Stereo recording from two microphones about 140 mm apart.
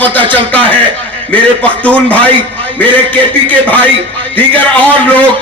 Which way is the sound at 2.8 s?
10° left (ahead or behind).